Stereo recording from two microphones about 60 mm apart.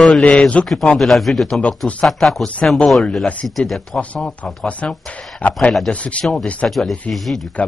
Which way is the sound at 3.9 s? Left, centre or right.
Centre.